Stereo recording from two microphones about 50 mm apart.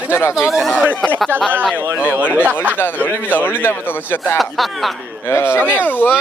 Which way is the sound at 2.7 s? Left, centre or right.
Left.